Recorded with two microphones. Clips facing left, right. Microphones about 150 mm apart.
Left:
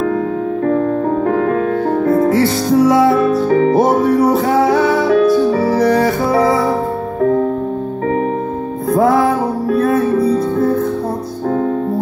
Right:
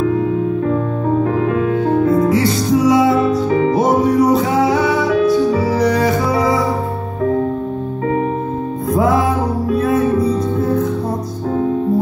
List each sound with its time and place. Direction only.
0.7 s music: 55° left (ahead or behind)
9.7 s music: 55° left (ahead or behind)